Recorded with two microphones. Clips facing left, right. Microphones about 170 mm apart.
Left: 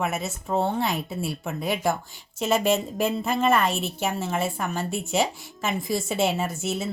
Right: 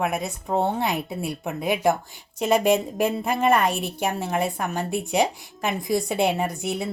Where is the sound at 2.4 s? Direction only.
55° right (ahead or behind).